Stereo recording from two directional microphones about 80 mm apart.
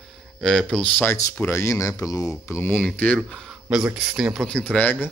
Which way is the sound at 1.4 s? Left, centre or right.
Left.